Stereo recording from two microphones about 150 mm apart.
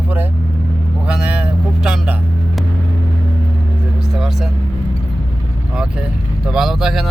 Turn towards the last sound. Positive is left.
turn(degrees=0)  # may be behind; listen again after turning